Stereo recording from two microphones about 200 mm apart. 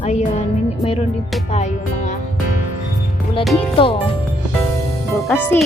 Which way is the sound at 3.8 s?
25° left (ahead or behind).